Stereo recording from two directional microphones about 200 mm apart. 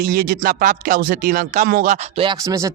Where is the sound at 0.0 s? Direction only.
50° right (ahead or behind).